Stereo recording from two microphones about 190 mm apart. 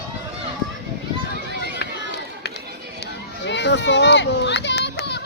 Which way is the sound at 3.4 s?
65° left (ahead or behind).